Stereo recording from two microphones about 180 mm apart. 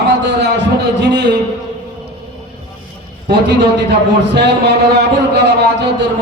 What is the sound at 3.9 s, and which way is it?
A man's voice, 70° right (ahead or behind).